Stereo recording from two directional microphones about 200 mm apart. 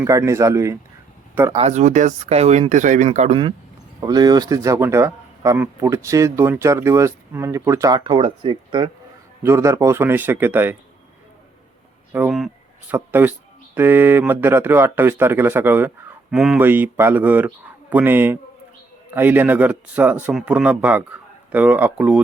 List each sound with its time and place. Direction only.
0.0 s speech: 15° right (ahead or behind)
1.5 s speech: 35° right (ahead or behind)
4.0 s speech: 20° right (ahead or behind)
12.1 s speech: 5° right (ahead or behind)